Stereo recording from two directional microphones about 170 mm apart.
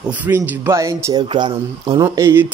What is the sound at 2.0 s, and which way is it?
Speech, 15° right (ahead or behind).